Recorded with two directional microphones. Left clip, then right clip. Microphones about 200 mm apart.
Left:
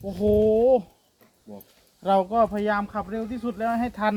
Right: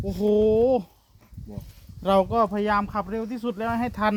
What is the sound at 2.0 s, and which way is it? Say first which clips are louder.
Speech: even; 60° right (ahead or behind).